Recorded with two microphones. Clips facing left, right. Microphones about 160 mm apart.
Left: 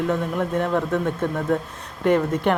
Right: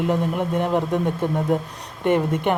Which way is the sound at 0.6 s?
30° right (ahead or behind).